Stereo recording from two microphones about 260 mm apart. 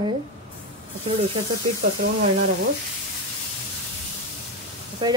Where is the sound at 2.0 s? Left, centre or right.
Right.